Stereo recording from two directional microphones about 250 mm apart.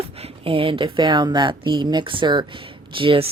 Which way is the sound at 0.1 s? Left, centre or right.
Right.